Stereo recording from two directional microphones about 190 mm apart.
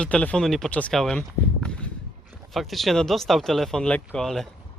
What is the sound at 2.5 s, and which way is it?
Speech, centre (ahead or behind).